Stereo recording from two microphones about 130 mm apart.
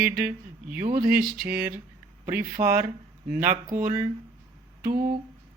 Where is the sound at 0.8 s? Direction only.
90° right.